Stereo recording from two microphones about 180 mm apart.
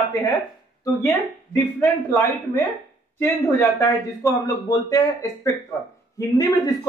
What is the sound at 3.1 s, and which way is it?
A man's voice, 15° left (ahead or behind).